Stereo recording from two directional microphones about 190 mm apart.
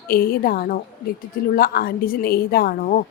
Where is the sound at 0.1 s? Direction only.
50° left (ahead or behind).